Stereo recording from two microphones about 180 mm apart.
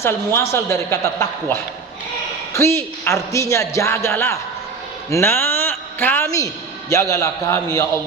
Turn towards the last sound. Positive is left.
turn(degrees=20)  # may be behind; listen again after turning